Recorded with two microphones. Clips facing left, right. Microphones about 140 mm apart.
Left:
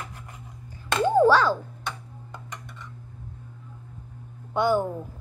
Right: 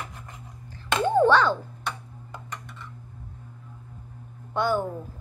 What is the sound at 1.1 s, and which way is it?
Ding, 5° left (ahead or behind).